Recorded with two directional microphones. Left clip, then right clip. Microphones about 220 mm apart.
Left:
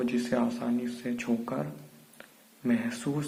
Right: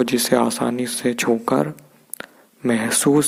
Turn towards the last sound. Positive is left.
turn(degrees=-40)  # may be behind; listen again after turning